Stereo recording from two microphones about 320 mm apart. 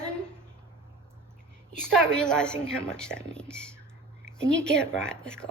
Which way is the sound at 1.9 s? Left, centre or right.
Centre.